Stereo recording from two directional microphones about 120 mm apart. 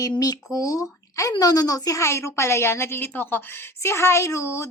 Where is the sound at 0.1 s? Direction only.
30° left (ahead or behind).